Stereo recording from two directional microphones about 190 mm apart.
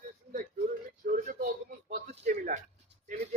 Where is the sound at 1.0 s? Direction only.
45° right (ahead or behind).